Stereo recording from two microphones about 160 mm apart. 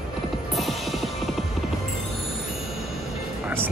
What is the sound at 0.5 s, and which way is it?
Music, centre (ahead or behind).